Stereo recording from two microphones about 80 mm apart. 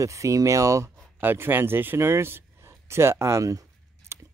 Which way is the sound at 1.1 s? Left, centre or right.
Right.